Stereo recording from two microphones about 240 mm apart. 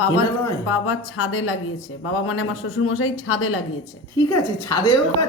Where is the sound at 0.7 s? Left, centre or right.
Left.